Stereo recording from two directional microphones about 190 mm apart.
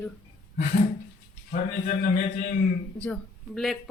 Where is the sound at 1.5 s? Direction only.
45° left (ahead or behind).